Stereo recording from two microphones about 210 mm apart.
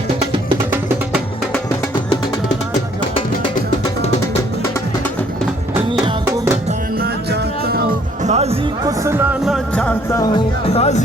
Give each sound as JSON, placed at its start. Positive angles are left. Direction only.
{"t": 6.2, "sound": "music", "side_deg": -10}
{"t": 7.0, "sound": "music", "side_deg": -45}
{"t": 8.2, "sound": "music", "side_deg": -30}
{"t": 8.8, "sound": "speech", "side_deg": -15}
{"t": 9.4, "sound": "music", "side_deg": 0}
{"t": 10.7, "sound": "speech", "side_deg": 30}